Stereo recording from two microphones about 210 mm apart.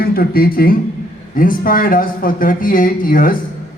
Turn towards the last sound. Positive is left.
turn(degrees=40)  # may be behind; listen again after turning